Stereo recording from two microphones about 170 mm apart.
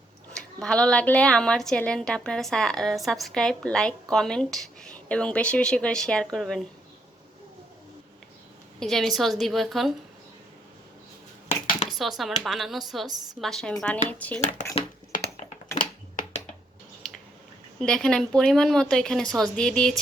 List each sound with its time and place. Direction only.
0.3 s a woman's voice: 5° left (ahead or behind)
8.8 s a woman's voice: centre (ahead or behind)
11.4 s a sound: 50° left (ahead or behind)
11.9 s a woman's voice: centre (ahead or behind)
15.4 s typing: 50° left (ahead or behind)
17.7 s a woman's voice: 5° left (ahead or behind)